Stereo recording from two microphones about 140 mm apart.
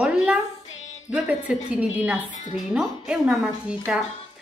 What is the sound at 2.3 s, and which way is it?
Speech, 60° left (ahead or behind).